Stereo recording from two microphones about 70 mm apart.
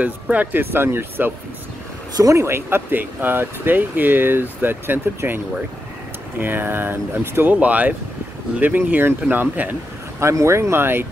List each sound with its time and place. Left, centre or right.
0.0 s speech: right
2.1 s speech: right
2.4 s speech: right
10.2 s speech: right